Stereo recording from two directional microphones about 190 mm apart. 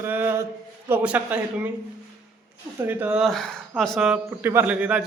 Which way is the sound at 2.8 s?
10° right (ahead or behind).